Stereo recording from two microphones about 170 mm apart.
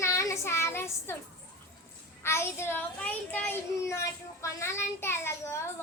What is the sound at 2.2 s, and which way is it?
A child's voice, 15° left (ahead or behind).